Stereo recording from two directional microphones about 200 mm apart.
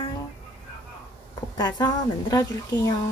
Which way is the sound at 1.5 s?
20° left (ahead or behind).